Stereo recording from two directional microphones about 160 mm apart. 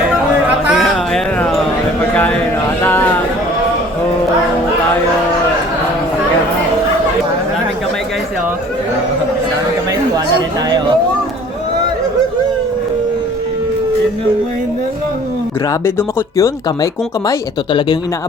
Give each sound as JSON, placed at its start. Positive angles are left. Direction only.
{"t": 0.4, "sound": "a sound", "side_deg": 0}
{"t": 16.0, "sound": "speech", "side_deg": 20}
{"t": 17.7, "sound": "speech", "side_deg": 30}